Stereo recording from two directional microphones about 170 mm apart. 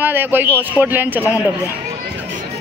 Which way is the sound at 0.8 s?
10° right (ahead or behind).